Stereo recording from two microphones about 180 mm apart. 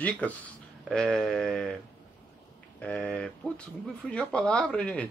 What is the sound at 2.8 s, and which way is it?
Speech, 5° left (ahead or behind).